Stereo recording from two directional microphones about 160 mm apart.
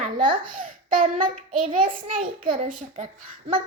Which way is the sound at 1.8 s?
35° right (ahead or behind).